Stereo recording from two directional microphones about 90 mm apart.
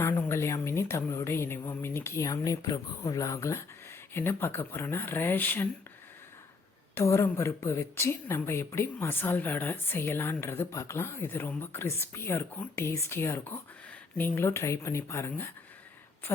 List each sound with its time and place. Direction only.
0.2 s a woman's voice: 30° left (ahead or behind)
6.9 s a woman's voice: 30° left (ahead or behind)